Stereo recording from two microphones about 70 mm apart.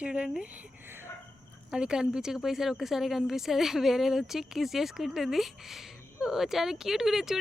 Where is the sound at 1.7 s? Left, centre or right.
Centre.